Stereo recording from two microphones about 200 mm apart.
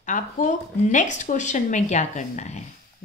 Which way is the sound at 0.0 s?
40° left (ahead or behind).